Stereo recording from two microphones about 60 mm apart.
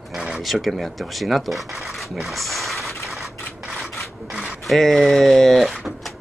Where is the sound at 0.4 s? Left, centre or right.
Centre.